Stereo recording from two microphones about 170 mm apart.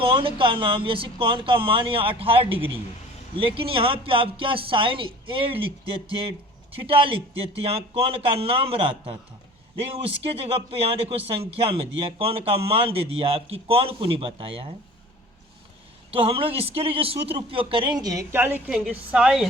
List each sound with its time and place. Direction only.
0.0 s speech: 30° right (ahead or behind)
16.1 s a woman's voice: 30° right (ahead or behind); by 19.5 s 5° right (ahead or behind)